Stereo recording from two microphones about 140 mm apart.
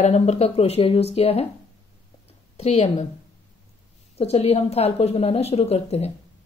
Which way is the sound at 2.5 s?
45° left (ahead or behind).